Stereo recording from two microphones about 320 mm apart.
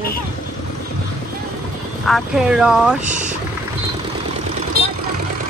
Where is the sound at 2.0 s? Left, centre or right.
Centre.